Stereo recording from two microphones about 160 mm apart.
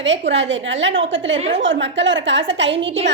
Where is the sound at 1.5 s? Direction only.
90° right.